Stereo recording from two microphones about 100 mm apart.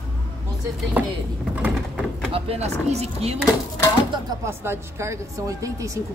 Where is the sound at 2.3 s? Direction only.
75° right (ahead or behind); by 3.4 s 90° right.